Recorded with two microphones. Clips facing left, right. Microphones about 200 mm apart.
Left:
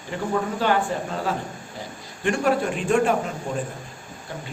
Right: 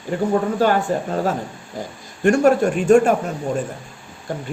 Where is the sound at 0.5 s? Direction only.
45° right (ahead or behind).